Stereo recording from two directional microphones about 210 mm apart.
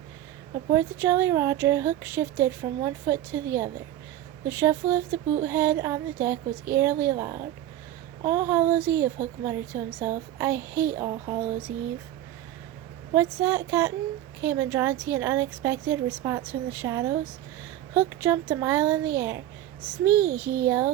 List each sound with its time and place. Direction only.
0.7 s speech: 10° right (ahead or behind)
13.1 s speech: 10° right (ahead or behind)
20.3 s a child's voice: 50° right (ahead or behind)
20.7 s speech: 10° right (ahead or behind)